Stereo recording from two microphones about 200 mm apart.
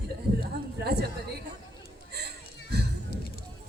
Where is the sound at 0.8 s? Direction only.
55° right (ahead or behind).